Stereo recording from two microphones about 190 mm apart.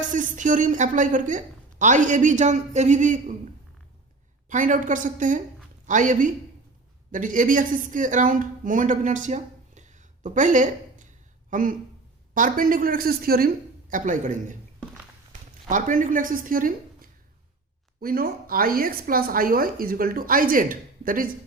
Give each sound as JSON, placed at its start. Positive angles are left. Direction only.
{"t": 0.1, "sound": "a man's voice", "side_deg": -40}
{"t": 4.4, "sound": "a woman's voice", "side_deg": -45}
{"t": 15.7, "sound": "a woman's voice", "side_deg": -45}